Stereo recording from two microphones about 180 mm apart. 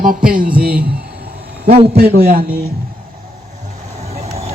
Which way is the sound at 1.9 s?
65° right (ahead or behind).